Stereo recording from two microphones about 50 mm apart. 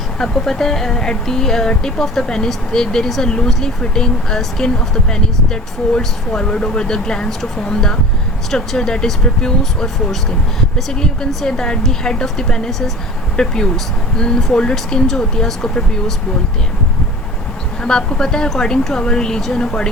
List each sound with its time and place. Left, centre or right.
0.2 s speech: centre
17.8 s speech: centre